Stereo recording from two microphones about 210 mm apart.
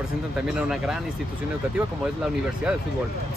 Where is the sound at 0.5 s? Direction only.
5° right (ahead or behind).